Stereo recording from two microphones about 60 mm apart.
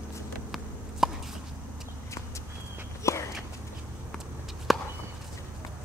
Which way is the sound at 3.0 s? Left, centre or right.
Left.